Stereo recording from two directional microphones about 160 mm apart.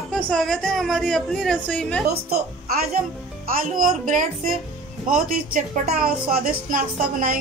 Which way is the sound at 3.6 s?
60° right (ahead or behind).